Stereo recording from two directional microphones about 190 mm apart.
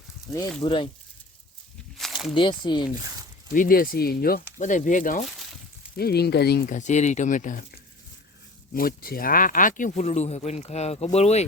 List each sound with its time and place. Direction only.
0.6 s speech: 25° left (ahead or behind)
2.0 s a sound: centre (ahead or behind)
2.3 s speech: 25° left (ahead or behind)
3.5 s speech: 45° left (ahead or behind)
6.0 s speech: 55° left (ahead or behind)
6.7 s speech: 40° left (ahead or behind)
8.7 s speech: 50° left (ahead or behind); by 11.4 s 35° left (ahead or behind)